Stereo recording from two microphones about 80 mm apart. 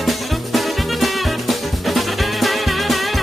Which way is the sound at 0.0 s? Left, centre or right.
Centre.